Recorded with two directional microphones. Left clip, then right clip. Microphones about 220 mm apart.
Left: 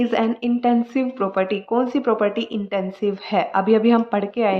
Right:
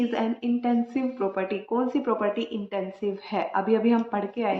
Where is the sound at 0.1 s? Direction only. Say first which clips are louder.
Left 7 dB; 55° left (ahead or behind).